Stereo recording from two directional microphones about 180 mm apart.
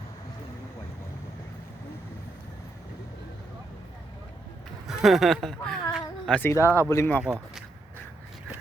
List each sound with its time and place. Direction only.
4.9 s speech: centre (ahead or behind)
6.6 s speech: 15° right (ahead or behind)
6.8 s speech: 15° left (ahead or behind)